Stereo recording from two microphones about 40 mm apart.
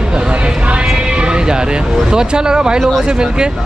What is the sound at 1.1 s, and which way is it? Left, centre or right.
Speech, right.